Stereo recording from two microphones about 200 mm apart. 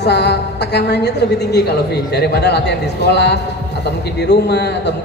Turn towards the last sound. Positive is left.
turn(degrees=55)  # may be behind; listen again after turning